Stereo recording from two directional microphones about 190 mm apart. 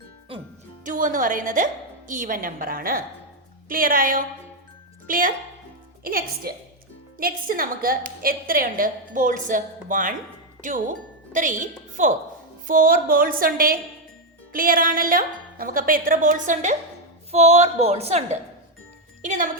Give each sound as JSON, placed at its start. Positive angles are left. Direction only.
{"t": 0.9, "sound": "a woman's voice", "side_deg": -45}